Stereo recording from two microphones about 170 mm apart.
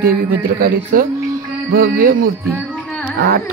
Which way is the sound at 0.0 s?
55° right (ahead or behind).